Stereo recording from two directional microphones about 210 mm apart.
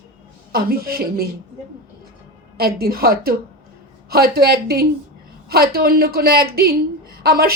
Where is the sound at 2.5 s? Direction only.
45° right (ahead or behind).